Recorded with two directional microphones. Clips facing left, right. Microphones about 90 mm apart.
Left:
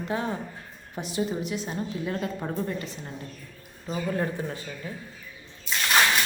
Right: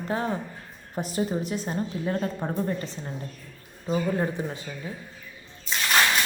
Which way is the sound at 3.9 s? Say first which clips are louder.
Right 3 dB; 20° right (ahead or behind).